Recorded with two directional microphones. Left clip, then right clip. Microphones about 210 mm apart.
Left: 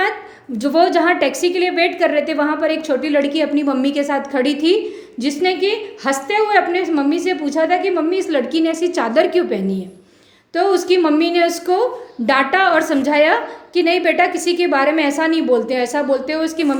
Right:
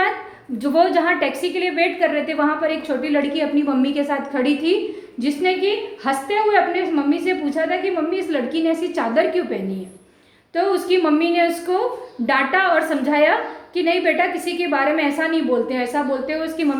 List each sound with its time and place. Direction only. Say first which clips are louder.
0.6 s a woman's voice: left 3 dB; 50° left (ahead or behind)